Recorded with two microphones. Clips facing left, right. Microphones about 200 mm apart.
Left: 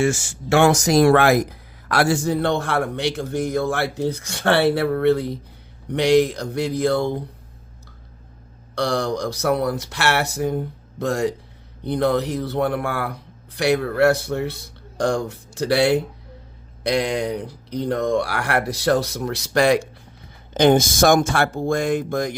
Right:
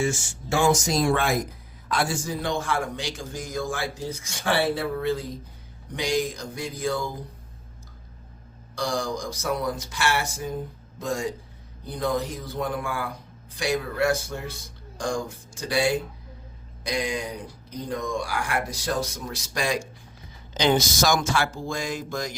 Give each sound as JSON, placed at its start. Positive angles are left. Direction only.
{"t": 0.0, "sound": "speech", "side_deg": 70}
{"t": 8.7, "sound": "speech", "side_deg": 65}
{"t": 20.5, "sound": "speech", "side_deg": 55}